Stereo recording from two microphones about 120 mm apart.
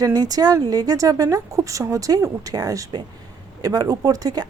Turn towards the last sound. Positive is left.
turn(degrees=-30)  # may be behind; listen again after turning